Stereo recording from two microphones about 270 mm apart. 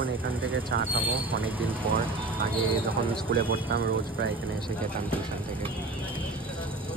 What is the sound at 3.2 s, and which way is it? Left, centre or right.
Speech, right.